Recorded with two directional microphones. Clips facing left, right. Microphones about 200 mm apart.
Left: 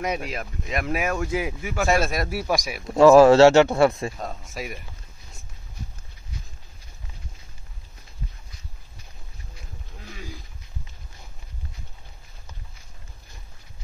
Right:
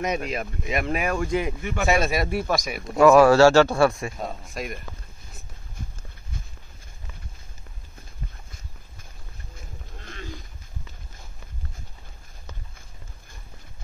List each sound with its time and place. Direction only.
0.0 s speech: 5° left (ahead or behind)
3.0 s speech: 25° left (ahead or behind)
4.2 s speech: centre (ahead or behind)
9.9 s a sound: 5° left (ahead or behind)